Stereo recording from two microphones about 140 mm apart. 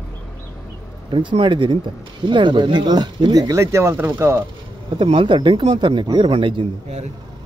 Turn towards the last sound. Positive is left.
turn(degrees=-40)  # may be behind; listen again after turning